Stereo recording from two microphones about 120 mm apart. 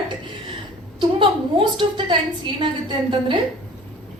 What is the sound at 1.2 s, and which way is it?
A woman's voice, 40° right (ahead or behind).